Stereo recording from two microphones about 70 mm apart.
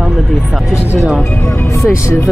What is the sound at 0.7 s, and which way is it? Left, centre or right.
Speech, left.